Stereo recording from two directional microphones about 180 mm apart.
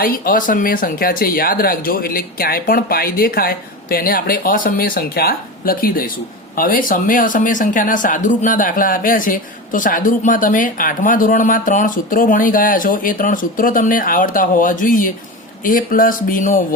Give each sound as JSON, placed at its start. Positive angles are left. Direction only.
{"t": 0.0, "sound": "speech", "side_deg": 50}